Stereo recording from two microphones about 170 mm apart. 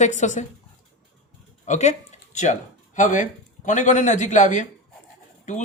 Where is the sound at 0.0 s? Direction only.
45° left (ahead or behind).